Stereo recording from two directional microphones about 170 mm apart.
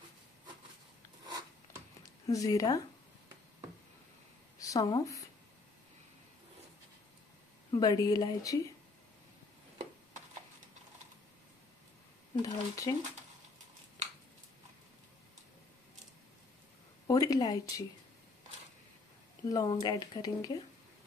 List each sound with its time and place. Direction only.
1.2 s filing: 20° right (ahead or behind)
2.0 s a woman's voice: 20° left (ahead or behind)
4.6 s a woman's voice: 20° left (ahead or behind)
7.7 s speech: 20° left (ahead or behind)
12.4 s speech: 20° left (ahead or behind)
17.1 s speech: 20° left (ahead or behind)
19.5 s speech: 25° left (ahead or behind)